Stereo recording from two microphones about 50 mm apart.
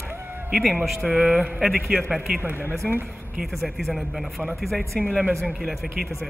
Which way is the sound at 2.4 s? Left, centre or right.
Right.